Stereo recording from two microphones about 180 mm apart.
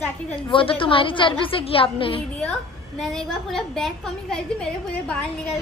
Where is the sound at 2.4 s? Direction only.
5° left (ahead or behind).